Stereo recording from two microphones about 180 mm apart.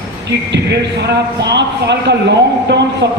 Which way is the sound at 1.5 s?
70° right (ahead or behind).